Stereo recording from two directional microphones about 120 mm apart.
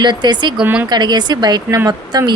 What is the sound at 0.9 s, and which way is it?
A woman's voice, 35° right (ahead or behind).